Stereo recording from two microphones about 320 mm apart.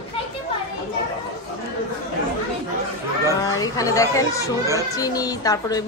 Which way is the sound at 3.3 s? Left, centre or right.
Centre.